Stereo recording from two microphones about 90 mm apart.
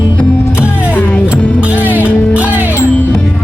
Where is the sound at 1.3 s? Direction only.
20° right (ahead or behind).